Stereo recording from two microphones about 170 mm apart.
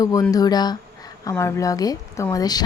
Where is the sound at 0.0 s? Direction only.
20° left (ahead or behind).